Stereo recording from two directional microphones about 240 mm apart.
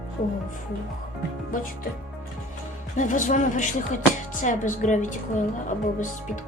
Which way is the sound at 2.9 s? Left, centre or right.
Left.